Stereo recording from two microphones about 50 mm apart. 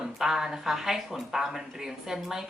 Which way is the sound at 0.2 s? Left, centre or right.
Centre.